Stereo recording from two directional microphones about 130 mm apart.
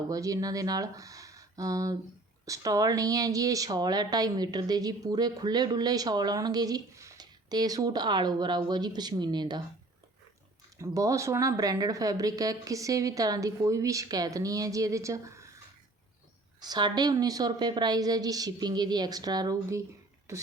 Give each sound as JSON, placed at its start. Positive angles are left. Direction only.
{"t": 0.1, "sound": "a woman's voice", "side_deg": -25}
{"t": 10.8, "sound": "speech", "side_deg": -25}
{"t": 16.6, "sound": "a woman's voice", "side_deg": -35}